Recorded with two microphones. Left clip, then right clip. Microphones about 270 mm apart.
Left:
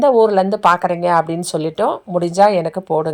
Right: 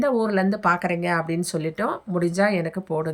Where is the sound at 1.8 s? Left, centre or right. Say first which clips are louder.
Left 7 dB; centre.